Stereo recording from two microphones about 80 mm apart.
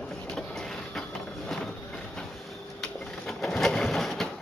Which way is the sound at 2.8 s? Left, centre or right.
Centre.